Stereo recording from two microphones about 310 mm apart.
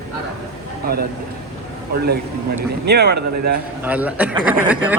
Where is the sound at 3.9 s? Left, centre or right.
Centre.